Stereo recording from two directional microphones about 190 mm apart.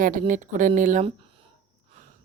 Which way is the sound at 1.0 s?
30° right (ahead or behind).